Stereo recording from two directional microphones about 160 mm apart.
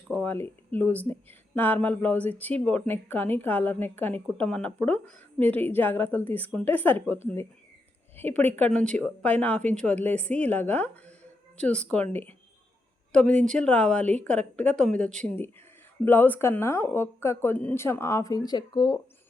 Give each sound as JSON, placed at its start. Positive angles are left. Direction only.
{"t": 0.1, "sound": "speech", "side_deg": 5}